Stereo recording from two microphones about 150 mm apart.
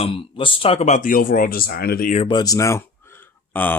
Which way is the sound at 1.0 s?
65° left (ahead or behind).